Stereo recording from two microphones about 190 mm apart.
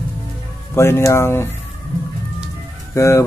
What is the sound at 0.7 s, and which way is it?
Speech, 15° left (ahead or behind).